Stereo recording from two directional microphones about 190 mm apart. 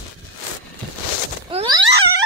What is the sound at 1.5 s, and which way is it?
Wail, 30° right (ahead or behind).